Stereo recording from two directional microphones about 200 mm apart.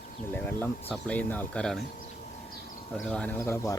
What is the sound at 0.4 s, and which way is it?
Speech, 10° left (ahead or behind).